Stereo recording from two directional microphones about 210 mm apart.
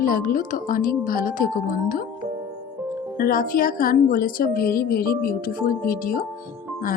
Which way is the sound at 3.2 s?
45° left (ahead or behind).